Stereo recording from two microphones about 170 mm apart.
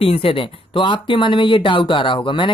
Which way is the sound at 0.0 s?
35° left (ahead or behind).